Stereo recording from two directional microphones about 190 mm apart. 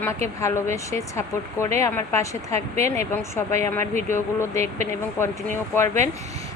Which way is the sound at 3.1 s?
15° left (ahead or behind).